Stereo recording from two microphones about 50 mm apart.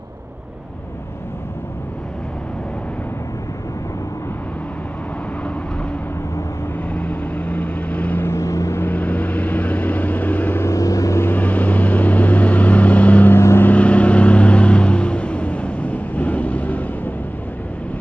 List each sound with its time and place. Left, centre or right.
6.9 s vehicle: left
8.4 s vehicle: left
8.9 s vehicle: left
10.6 s vehicle: left
11.2 s vehicle: left